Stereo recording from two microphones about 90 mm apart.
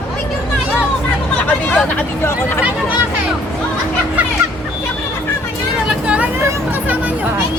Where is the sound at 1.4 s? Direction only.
15° left (ahead or behind).